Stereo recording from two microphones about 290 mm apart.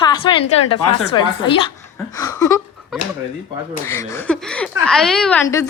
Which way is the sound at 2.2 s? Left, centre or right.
Centre.